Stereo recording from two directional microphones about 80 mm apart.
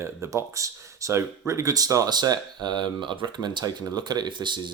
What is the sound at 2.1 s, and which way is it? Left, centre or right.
Speech, right.